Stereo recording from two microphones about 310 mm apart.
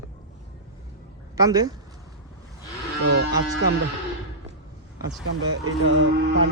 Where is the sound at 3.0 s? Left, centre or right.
Right.